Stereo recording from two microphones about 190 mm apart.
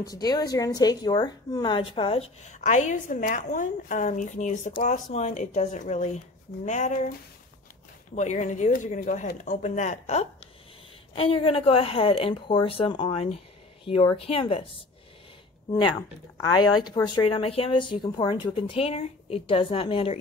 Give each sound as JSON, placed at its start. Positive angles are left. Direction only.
{"t": 0.0, "sound": "a woman's voice", "side_deg": 20}
{"t": 8.1, "sound": "a woman's voice", "side_deg": 40}
{"t": 16.7, "sound": "speech", "side_deg": 20}